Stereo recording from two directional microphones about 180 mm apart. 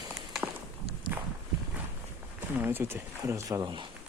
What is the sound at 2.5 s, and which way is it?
Speech, 10° right (ahead or behind).